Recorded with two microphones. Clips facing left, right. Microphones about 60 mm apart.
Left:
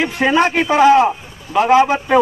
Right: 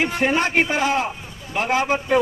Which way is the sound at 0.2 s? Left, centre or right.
Left.